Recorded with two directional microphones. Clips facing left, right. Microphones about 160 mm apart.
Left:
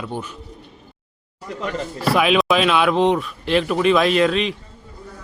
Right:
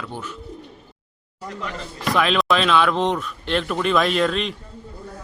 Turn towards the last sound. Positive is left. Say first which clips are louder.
# left 3 dB
turn(degrees=0)  # may be behind; listen again after turning